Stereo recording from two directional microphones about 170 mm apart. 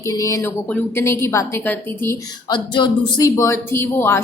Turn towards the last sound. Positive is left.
turn(degrees=15)  # may be behind; listen again after turning